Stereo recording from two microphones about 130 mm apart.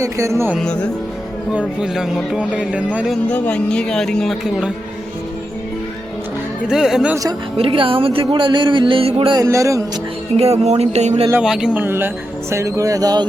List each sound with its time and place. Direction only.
0.0 s speech: 25° right (ahead or behind)
0.6 s speech: 5° left (ahead or behind)
1.5 s speech: 5° right (ahead or behind)
3.2 s speech: 10° left (ahead or behind)
6.7 s speech: 5° right (ahead or behind)
7.5 s speech: 45° right (ahead or behind)
9.4 s speech: 25° right (ahead or behind)
10.3 s music: 55° right (ahead or behind)
11.4 s speech: 5° right (ahead or behind); by 13.2 s 30° right (ahead or behind)